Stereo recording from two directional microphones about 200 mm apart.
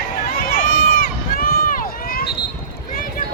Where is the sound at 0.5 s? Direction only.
45° left (ahead or behind).